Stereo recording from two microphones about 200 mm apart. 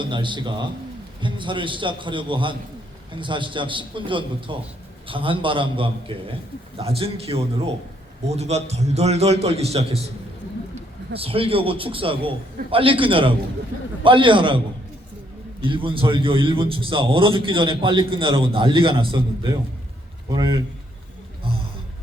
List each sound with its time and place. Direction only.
0.0 s a man's voice: 25° right (ahead or behind)
11.1 s a man's voice: 30° right (ahead or behind)
15.6 s a man's voice: 25° right (ahead or behind)